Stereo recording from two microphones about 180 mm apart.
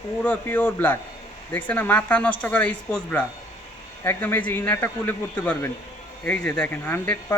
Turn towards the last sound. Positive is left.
turn(degrees=10)  # may be behind; listen again after turning